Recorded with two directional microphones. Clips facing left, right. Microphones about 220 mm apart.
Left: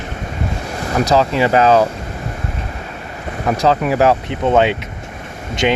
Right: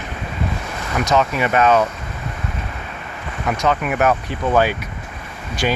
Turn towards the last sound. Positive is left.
turn(degrees=20)  # may be behind; listen again after turning